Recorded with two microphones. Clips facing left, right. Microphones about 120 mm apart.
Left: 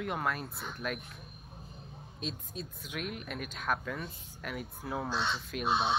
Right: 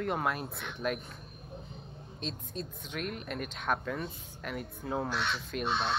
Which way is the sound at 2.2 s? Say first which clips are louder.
Right 1 dB; 5° left (ahead or behind).